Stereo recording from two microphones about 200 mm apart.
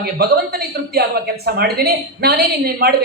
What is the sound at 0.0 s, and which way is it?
Speech, 50° right (ahead or behind).